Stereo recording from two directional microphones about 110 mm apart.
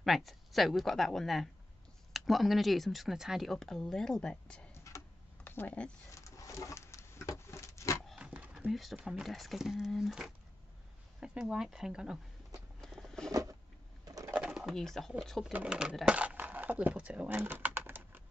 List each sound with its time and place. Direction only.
0.0 s speech: centre (ahead or behind)
4.7 s a sound: 25° left (ahead or behind)
6.1 s a sound: 30° left (ahead or behind)
8.2 s dog: 10° right (ahead or behind)
8.9 s speech: 5° right (ahead or behind)
12.8 s patter: centre (ahead or behind)
13.3 s a sound: 30° right (ahead or behind)
14.3 s speech: 10° right (ahead or behind)
15.5 s speech: 10° right (ahead or behind)
17.4 s typing: 15° right (ahead or behind)